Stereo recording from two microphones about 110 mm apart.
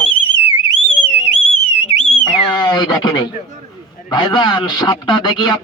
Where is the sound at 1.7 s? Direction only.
85° left.